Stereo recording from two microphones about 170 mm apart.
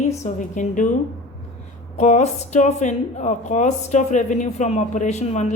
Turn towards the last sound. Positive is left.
turn(degrees=45)  # may be behind; listen again after turning